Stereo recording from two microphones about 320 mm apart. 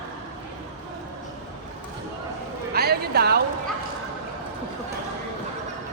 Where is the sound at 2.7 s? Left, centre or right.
Right.